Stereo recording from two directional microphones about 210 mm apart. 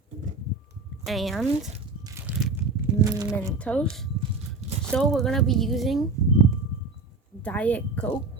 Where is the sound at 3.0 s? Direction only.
10° right (ahead or behind).